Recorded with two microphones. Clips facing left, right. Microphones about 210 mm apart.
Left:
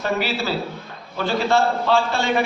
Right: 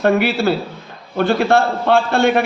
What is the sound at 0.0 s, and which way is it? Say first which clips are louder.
A man's voice: right 8 dB; 60° right (ahead or behind).